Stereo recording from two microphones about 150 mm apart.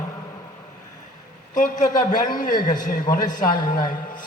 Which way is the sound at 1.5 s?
60° left (ahead or behind).